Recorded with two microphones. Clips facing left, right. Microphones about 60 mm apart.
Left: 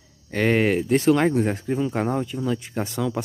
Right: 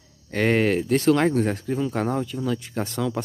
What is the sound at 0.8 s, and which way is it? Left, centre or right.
Speech, centre.